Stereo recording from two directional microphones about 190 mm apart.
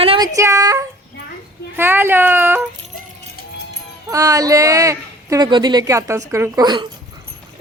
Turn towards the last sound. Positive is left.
turn(degrees=-25)  # may be behind; listen again after turning